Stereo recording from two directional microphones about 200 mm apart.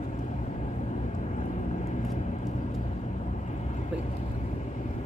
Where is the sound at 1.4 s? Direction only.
35° left (ahead or behind).